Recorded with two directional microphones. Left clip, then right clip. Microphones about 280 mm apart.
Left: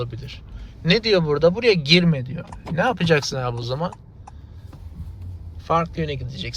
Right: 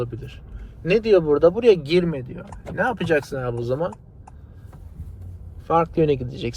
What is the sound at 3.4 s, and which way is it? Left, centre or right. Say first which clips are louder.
Speech: right 2 dB; centre.